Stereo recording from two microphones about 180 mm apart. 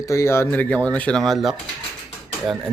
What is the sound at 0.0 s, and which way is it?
Speech, 15° left (ahead or behind).